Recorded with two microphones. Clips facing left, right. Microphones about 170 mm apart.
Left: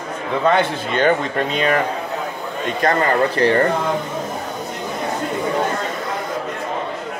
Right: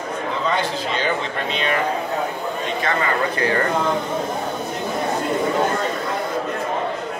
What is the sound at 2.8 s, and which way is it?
Speech, 40° left (ahead or behind).